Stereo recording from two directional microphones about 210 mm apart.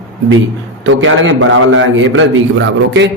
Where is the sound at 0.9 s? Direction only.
65° right (ahead or behind).